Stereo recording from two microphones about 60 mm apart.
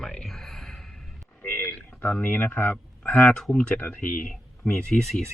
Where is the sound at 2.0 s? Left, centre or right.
Left.